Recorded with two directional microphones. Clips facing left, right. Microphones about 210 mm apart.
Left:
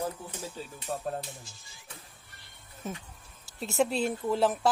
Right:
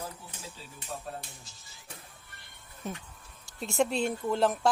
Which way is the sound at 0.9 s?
45° left (ahead or behind).